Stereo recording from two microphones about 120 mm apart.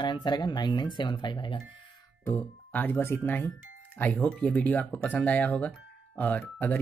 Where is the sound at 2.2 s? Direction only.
15° left (ahead or behind).